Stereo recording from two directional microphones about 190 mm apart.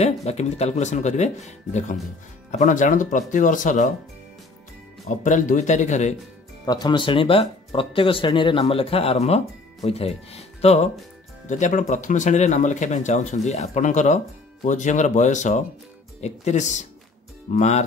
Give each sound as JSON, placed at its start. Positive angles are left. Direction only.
{"t": 0.0, "sound": "speech", "side_deg": 35}
{"t": 5.0, "sound": "speech", "side_deg": 40}
{"t": 6.6, "sound": "speech", "side_deg": 20}